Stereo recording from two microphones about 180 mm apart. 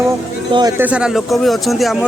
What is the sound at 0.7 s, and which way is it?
Speech, 5° right (ahead or behind).